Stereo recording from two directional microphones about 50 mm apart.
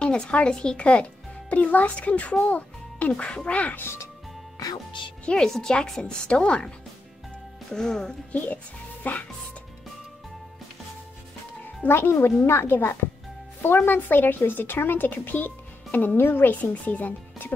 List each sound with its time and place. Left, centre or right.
0.0 s a woman's voice: left
2.4 s music: left
3.1 s a woman's voice: left
5.2 s speech: centre
7.7 s speech: centre
8.3 s speech: left
11.9 s speech: left
16.7 s speech: left